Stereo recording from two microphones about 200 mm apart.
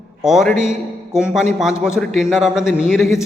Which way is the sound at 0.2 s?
Centre (ahead or behind).